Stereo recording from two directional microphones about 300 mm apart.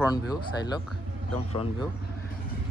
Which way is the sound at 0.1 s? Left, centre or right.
Centre.